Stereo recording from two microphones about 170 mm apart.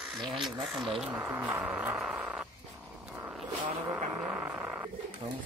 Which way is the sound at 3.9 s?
10° right (ahead or behind).